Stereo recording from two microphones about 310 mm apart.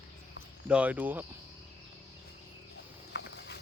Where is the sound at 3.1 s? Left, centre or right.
Left.